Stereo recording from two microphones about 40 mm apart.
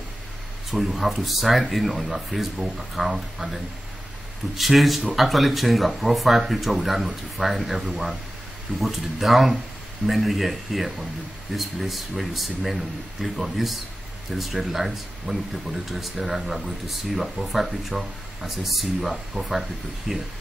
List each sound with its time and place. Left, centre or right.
0.7 s speech: centre
4.6 s speech: centre